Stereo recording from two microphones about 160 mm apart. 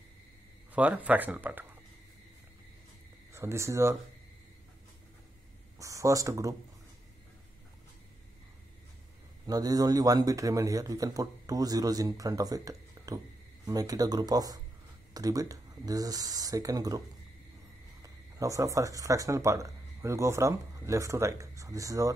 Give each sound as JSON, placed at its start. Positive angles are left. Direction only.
{"t": 0.7, "sound": "speech", "side_deg": -10}
{"t": 3.3, "sound": "speech", "side_deg": -15}
{"t": 5.8, "sound": "speech", "side_deg": -20}
{"t": 9.5, "sound": "a man's voice", "side_deg": -25}
{"t": 18.0, "sound": "speech", "side_deg": -20}